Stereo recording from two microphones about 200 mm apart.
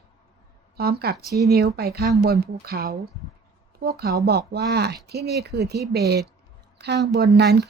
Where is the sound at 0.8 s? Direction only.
50° right (ahead or behind).